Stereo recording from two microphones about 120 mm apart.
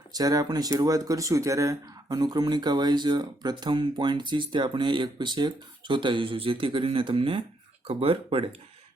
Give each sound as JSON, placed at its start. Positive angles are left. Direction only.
{"t": 0.1, "sound": "speech", "side_deg": -30}